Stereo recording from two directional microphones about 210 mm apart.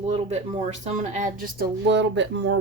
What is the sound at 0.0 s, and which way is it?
A woman's voice, 30° right (ahead or behind).